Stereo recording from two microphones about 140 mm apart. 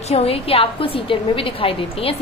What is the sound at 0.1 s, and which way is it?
A woman's voice, 45° left (ahead or behind).